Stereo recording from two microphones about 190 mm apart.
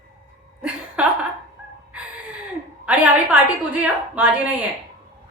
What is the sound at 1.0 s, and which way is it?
Speech, 5° right (ahead or behind).